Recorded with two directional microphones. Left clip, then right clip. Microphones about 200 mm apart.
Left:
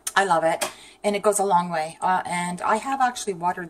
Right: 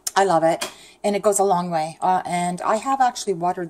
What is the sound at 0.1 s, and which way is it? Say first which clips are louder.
A woman's voice: right 3 dB; 55° right (ahead or behind).